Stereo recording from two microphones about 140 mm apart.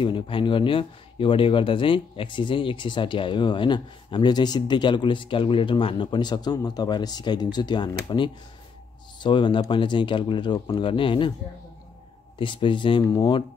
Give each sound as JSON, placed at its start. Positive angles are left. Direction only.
{"t": 0.0, "sound": "speech", "side_deg": 35}
{"t": 12.4, "sound": "speech", "side_deg": 35}